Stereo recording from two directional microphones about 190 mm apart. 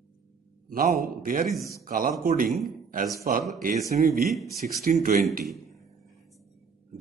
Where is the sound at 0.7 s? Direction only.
50° right (ahead or behind).